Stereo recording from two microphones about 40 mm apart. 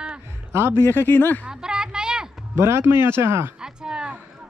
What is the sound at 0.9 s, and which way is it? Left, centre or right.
Speech, left.